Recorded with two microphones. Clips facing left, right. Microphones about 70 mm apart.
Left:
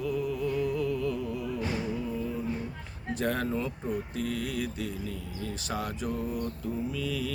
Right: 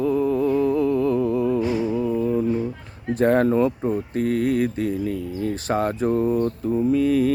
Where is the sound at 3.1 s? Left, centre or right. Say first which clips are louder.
Right 13 dB; right.